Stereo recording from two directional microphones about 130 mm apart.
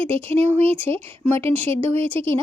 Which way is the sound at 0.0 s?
45° right (ahead or behind).